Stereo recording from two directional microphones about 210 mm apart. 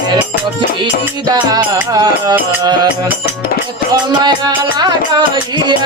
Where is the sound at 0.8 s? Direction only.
20° right (ahead or behind).